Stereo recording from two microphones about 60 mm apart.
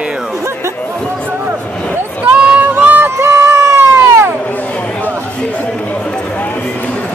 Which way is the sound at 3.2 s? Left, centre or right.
Right.